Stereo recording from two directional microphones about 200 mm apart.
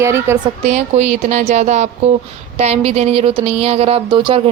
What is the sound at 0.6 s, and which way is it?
Speech, 35° right (ahead or behind).